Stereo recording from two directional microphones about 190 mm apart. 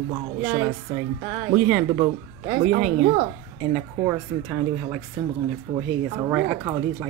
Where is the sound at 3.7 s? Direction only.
5° right (ahead or behind).